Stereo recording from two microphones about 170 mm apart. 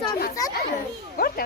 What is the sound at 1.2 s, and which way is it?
Speech, 65° left (ahead or behind).